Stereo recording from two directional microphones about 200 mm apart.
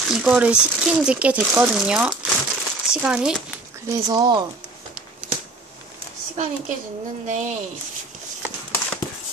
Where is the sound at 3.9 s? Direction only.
20° right (ahead or behind).